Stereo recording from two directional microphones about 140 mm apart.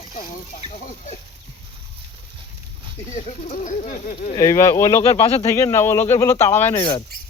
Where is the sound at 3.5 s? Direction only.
65° left (ahead or behind).